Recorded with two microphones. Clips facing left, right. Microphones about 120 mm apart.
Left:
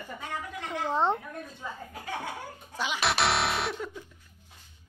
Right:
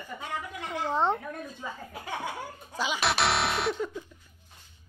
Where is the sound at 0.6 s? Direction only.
Centre (ahead or behind).